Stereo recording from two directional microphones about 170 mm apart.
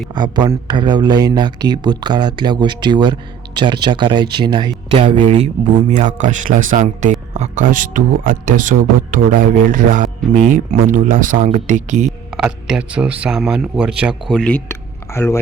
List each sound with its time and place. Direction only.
0.1 s speech: 25° right (ahead or behind)
5.1 s speech: 35° right (ahead or behind)
12.3 s speech: 5° right (ahead or behind); by 15.4 s 15° left (ahead or behind)